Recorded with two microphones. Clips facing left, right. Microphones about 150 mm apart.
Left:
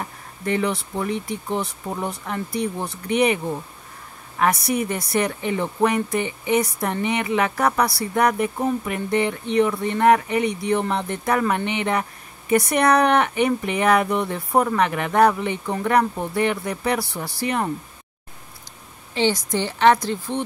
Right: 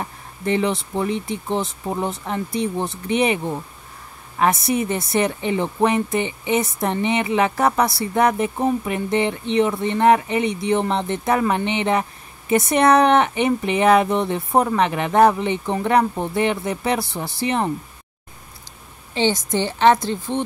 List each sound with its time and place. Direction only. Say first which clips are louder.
0.5 s a woman's voice: right 2 dB; 25° right (ahead or behind)
4.4 s a woman's voice: right 2 dB; 25° right (ahead or behind)
19.1 s a woman's voice: right 1 dB; 25° right (ahead or behind)